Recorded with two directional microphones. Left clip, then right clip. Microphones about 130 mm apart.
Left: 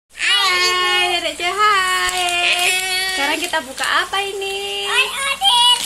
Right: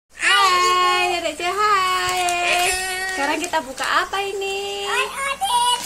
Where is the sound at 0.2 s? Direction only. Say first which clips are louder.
Even; 10° right (ahead or behind).